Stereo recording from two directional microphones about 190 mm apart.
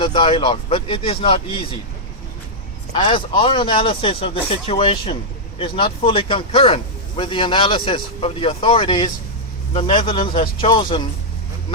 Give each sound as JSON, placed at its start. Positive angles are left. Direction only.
{"t": 0.0, "sound": "a man's voice", "side_deg": 25}
{"t": 2.9, "sound": "a man's voice", "side_deg": 25}